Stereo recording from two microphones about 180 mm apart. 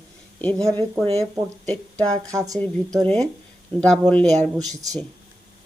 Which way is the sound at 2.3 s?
20° right (ahead or behind).